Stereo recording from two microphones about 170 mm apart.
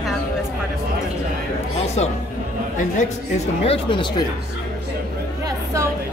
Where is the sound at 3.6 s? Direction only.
30° left (ahead or behind).